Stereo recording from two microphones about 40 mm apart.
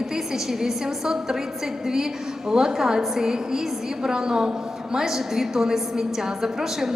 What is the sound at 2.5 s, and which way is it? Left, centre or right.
A man's voice, centre.